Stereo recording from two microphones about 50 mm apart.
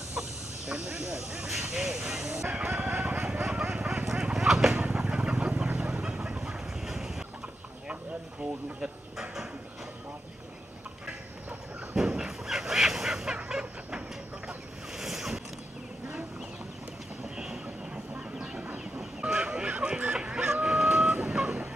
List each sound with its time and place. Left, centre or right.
0.1 s speech: centre
2.0 s chicken: centre
4.7 s chicken: right
7.9 s a sound: right
11.9 s fowl: centre
15.0 s boat: centre
18.4 s train: centre
19.3 s a sound: right
20.6 s vehicle: centre